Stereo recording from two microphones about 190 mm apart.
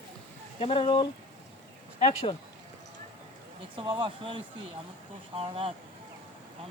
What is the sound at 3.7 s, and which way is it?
Speech, 25° right (ahead or behind).